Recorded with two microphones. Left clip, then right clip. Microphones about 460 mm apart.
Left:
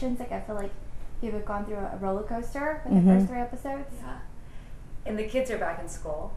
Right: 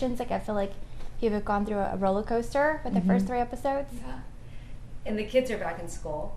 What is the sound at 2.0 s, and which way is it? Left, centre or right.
A woman's voice, right.